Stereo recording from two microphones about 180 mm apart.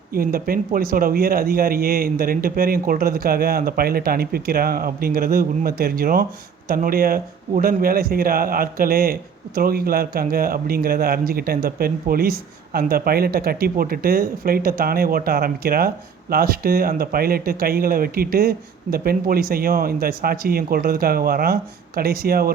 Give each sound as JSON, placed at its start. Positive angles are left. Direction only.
{"t": 0.1, "sound": "speech", "side_deg": -55}